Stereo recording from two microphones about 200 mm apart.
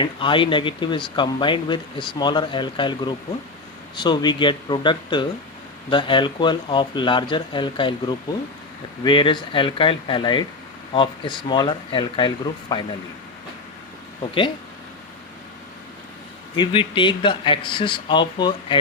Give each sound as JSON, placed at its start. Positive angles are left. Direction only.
{"t": 0.0, "sound": "speech", "side_deg": 25}
{"t": 16.6, "sound": "speech", "side_deg": 25}